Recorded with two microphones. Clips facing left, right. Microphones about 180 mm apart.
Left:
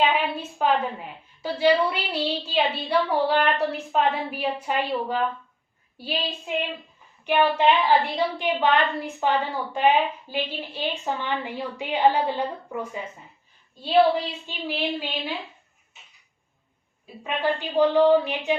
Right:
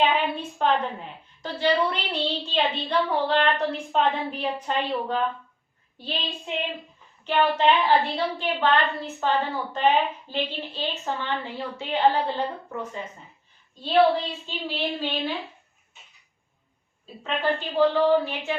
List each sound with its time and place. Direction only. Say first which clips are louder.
0.1 s a woman's voice: even; 5° left (ahead or behind)
14.4 s a woman's voice: left 1 dB; 10° left (ahead or behind)
17.2 s a woman's voice: even; 15° left (ahead or behind)